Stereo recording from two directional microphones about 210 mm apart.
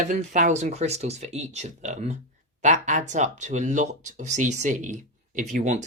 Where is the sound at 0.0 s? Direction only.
35° right (ahead or behind).